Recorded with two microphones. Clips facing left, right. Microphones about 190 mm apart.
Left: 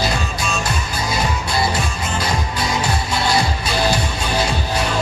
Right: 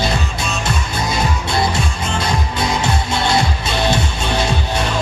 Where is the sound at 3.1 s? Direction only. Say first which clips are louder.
Right 1 dB; 25° right (ahead or behind).